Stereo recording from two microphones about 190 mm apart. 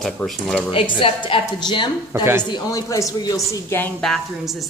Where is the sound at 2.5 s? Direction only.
20° left (ahead or behind).